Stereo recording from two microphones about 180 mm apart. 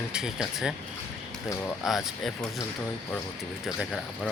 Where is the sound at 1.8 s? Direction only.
Centre (ahead or behind).